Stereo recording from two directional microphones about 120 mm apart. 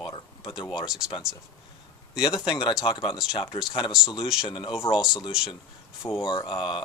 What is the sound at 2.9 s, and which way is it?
Speech, 40° left (ahead or behind).